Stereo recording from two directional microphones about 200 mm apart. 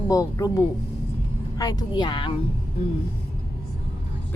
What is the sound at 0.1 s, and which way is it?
Speech, 15° left (ahead or behind).